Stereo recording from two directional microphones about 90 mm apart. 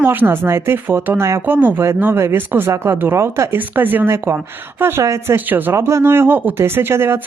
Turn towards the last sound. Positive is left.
turn(degrees=-25)  # may be behind; listen again after turning